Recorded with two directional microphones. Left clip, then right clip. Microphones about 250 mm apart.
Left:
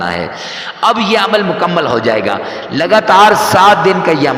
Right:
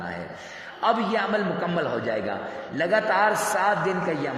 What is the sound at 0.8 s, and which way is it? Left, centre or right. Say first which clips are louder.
A man's voice: left 12 dB; left.